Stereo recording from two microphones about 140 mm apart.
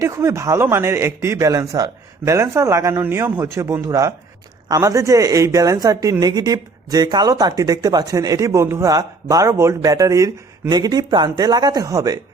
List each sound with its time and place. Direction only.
0.0 s speech: 20° right (ahead or behind)